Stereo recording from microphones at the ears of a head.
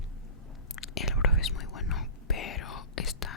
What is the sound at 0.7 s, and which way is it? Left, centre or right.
Whispering, left.